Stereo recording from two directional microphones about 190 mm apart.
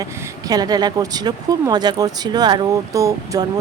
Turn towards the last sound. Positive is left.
turn(degrees=-15)  # may be behind; listen again after turning